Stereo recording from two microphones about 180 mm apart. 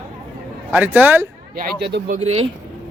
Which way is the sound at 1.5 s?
70° right (ahead or behind).